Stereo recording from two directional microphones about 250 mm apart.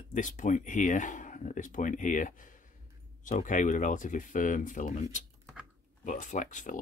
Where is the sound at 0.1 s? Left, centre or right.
Left.